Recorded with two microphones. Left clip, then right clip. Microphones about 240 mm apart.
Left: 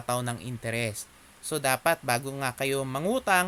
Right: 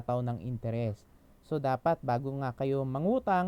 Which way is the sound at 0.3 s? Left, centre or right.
Centre.